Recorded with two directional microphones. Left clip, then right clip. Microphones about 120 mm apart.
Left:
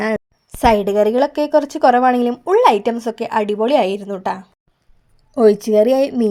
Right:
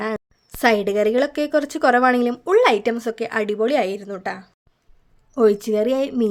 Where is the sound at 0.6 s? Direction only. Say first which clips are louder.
Left 4 dB; 5° left (ahead or behind).